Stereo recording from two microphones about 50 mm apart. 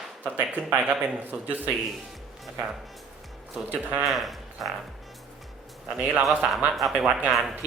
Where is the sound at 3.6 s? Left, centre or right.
Right.